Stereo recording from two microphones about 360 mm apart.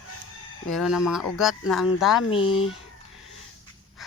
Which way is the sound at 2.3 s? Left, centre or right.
Centre.